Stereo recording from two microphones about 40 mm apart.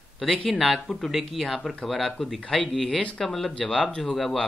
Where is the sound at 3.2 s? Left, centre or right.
Centre.